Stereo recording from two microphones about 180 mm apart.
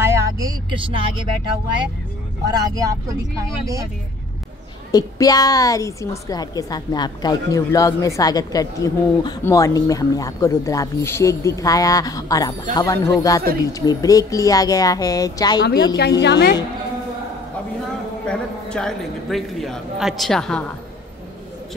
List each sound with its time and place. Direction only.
0.0 s a sound: 15° right (ahead or behind)
2.5 s speech: 20° right (ahead or behind)
4.9 s a woman's voice: 20° left (ahead or behind)
15.6 s a woman's voice: 65° left (ahead or behind)
18.2 s a man's voice: 5° left (ahead or behind)